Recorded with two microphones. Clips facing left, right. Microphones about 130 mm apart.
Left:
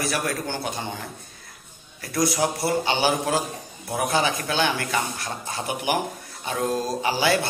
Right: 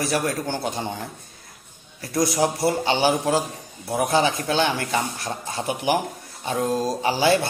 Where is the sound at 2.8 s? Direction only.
35° right (ahead or behind).